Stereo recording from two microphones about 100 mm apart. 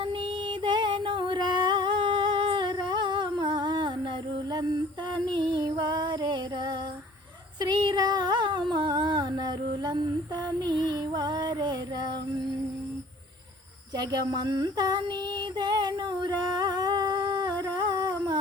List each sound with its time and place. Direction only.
0.0 s a sound: 60° right (ahead or behind)
4.5 s female singing: 50° right (ahead or behind)
7.6 s humming: 45° right (ahead or behind)
13.9 s female singing: 45° right (ahead or behind)
16.4 s humming: 45° right (ahead or behind)
17.6 s a sound: 45° right (ahead or behind)